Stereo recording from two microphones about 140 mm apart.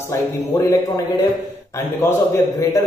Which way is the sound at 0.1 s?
20° left (ahead or behind).